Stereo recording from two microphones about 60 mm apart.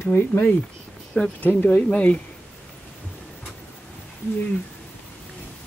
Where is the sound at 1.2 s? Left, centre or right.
Left.